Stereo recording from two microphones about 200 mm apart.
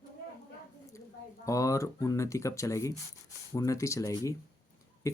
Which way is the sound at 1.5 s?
15° left (ahead or behind).